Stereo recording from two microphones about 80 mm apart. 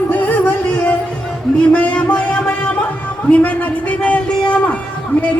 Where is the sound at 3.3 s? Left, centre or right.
Centre.